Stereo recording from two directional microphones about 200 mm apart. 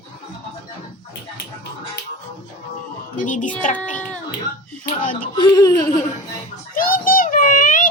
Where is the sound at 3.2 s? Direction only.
40° left (ahead or behind).